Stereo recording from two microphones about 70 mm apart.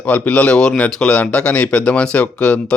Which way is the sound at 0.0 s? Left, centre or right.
Centre.